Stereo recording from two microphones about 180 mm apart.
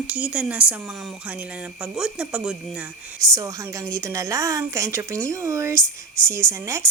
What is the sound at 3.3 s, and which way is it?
A woman's voice, 15° right (ahead or behind).